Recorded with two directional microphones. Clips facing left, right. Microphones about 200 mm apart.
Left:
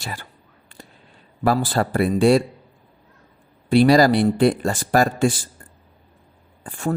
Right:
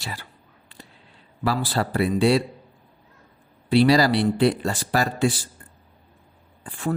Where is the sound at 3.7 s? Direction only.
50° left (ahead or behind).